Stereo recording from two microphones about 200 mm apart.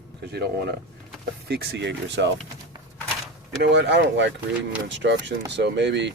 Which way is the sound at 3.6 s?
60° right (ahead or behind).